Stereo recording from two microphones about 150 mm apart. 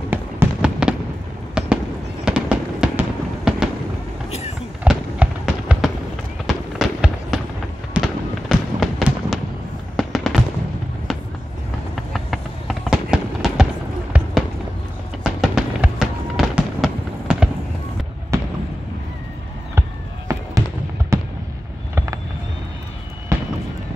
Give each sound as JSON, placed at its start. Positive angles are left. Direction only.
{"t": 0.1, "sound": "fireworks", "side_deg": -10}
{"t": 4.8, "sound": "fireworks", "side_deg": -5}
{"t": 11.9, "sound": "fireworks", "side_deg": 0}
{"t": 15.2, "sound": "fireworks", "side_deg": -5}
{"t": 18.3, "sound": "fireworks", "side_deg": -20}
{"t": 20.3, "sound": "fireworks", "side_deg": -20}
{"t": 21.9, "sound": "vehicle", "side_deg": -20}